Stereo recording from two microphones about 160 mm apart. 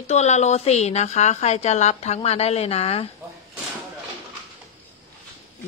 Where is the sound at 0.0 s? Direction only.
45° left (ahead or behind).